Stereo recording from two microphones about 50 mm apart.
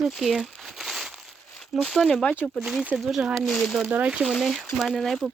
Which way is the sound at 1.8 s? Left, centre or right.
Centre.